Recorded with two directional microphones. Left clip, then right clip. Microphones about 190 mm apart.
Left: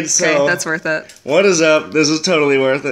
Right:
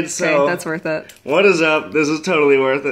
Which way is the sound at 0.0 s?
45° left (ahead or behind).